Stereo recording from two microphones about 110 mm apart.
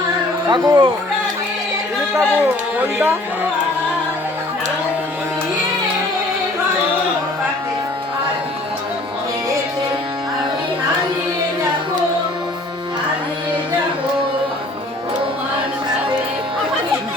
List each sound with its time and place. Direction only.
0.4 s speech: 40° right (ahead or behind)